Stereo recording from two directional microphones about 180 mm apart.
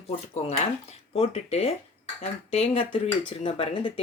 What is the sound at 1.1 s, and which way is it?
Speech, 35° left (ahead or behind).